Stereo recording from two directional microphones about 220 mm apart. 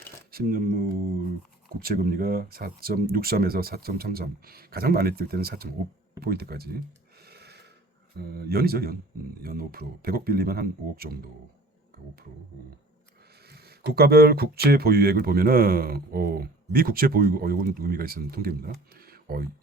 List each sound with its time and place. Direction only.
0.3 s speech: 40° right (ahead or behind)
6.1 s a sound: 45° right (ahead or behind)
8.4 s speech: 45° right (ahead or behind)
13.5 s speech: 45° right (ahead or behind)